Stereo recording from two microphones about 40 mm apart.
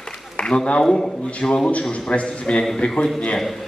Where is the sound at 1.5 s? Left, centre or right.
Left; by 3.1 s centre.